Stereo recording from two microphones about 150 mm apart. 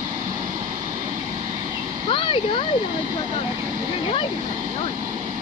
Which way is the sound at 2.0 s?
35° left (ahead or behind).